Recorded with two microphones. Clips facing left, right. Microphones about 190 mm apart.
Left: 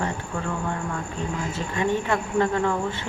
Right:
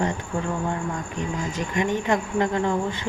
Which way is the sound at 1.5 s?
15° right (ahead or behind).